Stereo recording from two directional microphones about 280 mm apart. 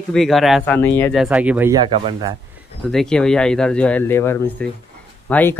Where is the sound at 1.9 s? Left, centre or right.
Centre.